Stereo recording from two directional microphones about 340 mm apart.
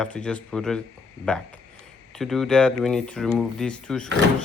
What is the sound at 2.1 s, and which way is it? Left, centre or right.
Speech, centre.